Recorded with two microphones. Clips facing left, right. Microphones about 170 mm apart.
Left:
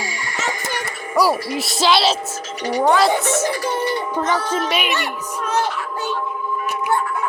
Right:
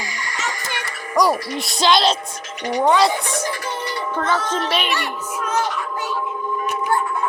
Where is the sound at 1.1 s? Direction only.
5° left (ahead or behind).